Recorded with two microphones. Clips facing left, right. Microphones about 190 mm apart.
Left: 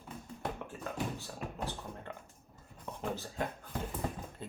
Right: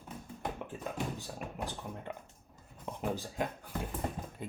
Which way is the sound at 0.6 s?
15° right (ahead or behind).